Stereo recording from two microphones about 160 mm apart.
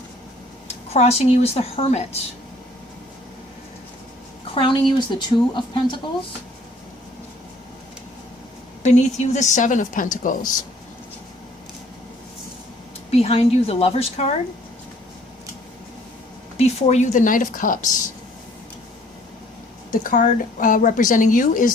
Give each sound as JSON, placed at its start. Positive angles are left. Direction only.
{"t": 0.9, "sound": "a woman's voice", "side_deg": 40}
{"t": 4.5, "sound": "speech", "side_deg": 30}
{"t": 8.8, "sound": "a woman's voice", "side_deg": 45}
{"t": 13.1, "sound": "a woman's voice", "side_deg": 40}
{"t": 16.6, "sound": "a woman's voice", "side_deg": 40}
{"t": 19.9, "sound": "a woman's voice", "side_deg": 60}